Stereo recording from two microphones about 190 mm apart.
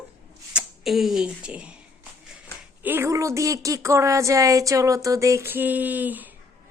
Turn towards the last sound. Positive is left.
turn(degrees=-10)  # may be behind; listen again after turning